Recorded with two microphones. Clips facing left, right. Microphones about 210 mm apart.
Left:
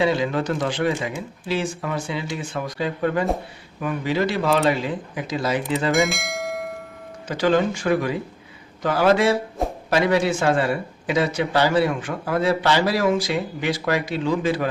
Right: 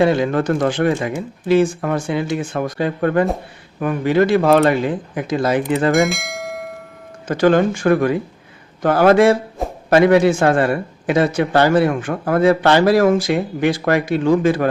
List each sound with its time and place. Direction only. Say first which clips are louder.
0.0 s a man's voice: right 5 dB; 50° right (ahead or behind)
5.9 s bell: right 4 dB; centre (ahead or behind)
7.3 s a man's voice: right 5 dB; 50° right (ahead or behind)
9.6 s a sound: right 1 dB; centre (ahead or behind)
9.9 s a man's voice: right 8 dB; 55° right (ahead or behind)